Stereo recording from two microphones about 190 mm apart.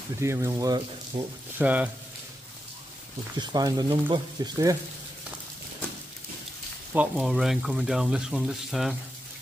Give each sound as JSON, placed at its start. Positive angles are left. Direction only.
{"t": 0.2, "sound": "speech", "side_deg": -15}
{"t": 1.6, "sound": "speech", "side_deg": -5}
{"t": 3.3, "sound": "speech", "side_deg": -20}
{"t": 6.9, "sound": "speech", "side_deg": -5}